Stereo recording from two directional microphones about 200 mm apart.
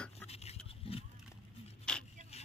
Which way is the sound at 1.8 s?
5° left (ahead or behind).